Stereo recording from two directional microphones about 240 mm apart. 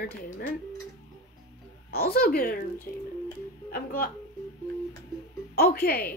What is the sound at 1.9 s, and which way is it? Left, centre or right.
A woman's voice, left.